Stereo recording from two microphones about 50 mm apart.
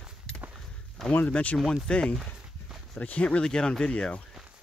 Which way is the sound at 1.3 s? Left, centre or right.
Left.